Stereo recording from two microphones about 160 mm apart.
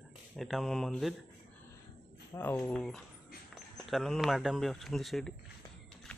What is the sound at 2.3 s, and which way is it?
Speech, 15° left (ahead or behind).